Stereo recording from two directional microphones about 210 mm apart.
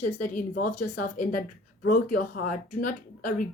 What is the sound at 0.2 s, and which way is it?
A woman's voice, 40° left (ahead or behind).